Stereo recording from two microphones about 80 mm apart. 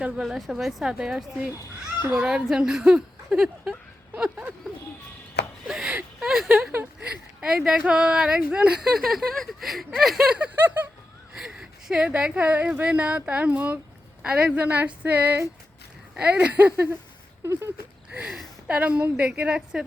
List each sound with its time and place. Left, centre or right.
0.2 s speech: centre
5.6 s a sound: centre
7.4 s speech: centre
11.3 s speech: centre
17.4 s a sound: right
18.7 s speech: centre